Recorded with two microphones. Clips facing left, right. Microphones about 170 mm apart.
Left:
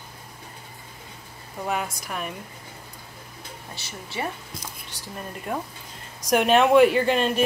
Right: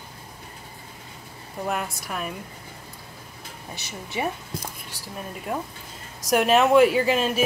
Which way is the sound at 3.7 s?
20° right (ahead or behind).